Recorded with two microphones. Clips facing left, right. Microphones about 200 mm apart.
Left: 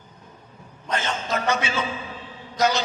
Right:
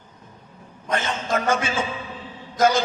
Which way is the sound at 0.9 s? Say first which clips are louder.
Right 2 dB; 50° right (ahead or behind).